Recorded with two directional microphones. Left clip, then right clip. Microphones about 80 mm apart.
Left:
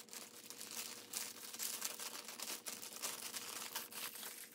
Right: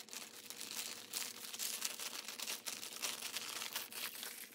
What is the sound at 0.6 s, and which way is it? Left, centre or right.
Crumpling, centre.